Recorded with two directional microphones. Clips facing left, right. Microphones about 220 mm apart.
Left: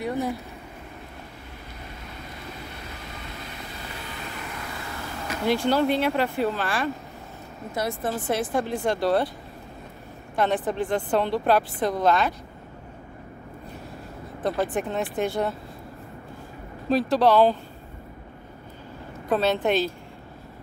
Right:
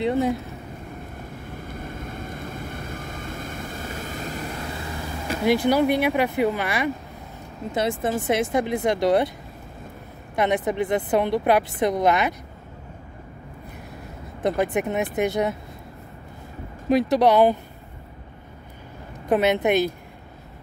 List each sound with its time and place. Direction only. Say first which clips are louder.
0.0 s speech: right 5 dB; 15° right (ahead or behind)
1.7 s vehicle: right 8 dB; 50° right (ahead or behind)
5.4 s speech: right 3 dB; 15° right (ahead or behind)
10.3 s speech: right 2 dB; 15° right (ahead or behind)
14.6 s speech: right 3 dB; 15° right (ahead or behind)
16.9 s speech: right 2 dB; 20° right (ahead or behind)
19.2 s speech: right 3 dB; 15° right (ahead or behind)